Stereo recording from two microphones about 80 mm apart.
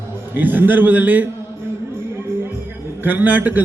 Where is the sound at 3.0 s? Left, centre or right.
Right.